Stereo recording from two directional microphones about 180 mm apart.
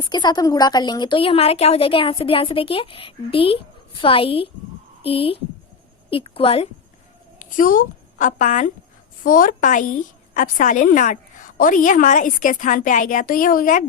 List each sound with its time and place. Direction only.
0.0 s a woman's voice: 25° left (ahead or behind)
7.3 s a woman's voice: 50° left (ahead or behind)